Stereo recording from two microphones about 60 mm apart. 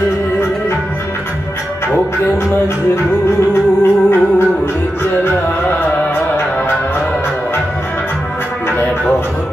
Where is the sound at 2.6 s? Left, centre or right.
Left.